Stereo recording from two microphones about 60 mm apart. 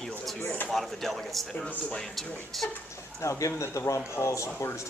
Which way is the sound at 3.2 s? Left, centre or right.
Left.